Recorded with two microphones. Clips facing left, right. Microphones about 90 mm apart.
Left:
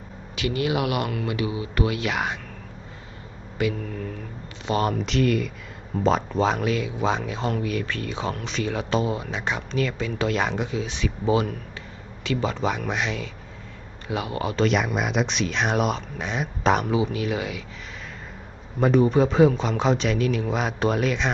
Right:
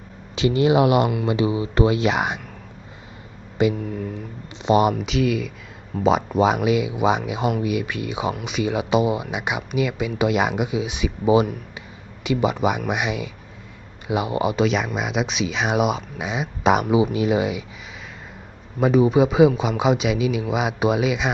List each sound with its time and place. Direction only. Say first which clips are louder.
0.3 s speech: right 7 dB; 25° right (ahead or behind)
3.8 s speech: right 4 dB; 10° right (ahead or behind)
14.6 s speech: right 1 dB; centre (ahead or behind); by 17.7 s 20° right (ahead or behind)
18.8 s speech: right 2 dB; 5° right (ahead or behind)